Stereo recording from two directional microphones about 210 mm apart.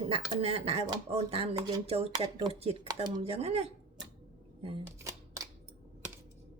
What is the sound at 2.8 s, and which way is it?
Speech, 15° right (ahead or behind).